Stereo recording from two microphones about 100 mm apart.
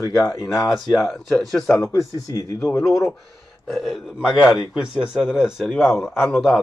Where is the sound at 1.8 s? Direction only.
35° left (ahead or behind).